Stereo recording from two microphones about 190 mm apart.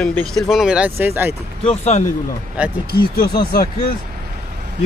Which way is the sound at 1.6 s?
35° left (ahead or behind).